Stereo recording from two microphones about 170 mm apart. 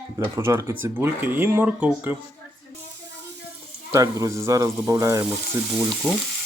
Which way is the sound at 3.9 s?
20° right (ahead or behind).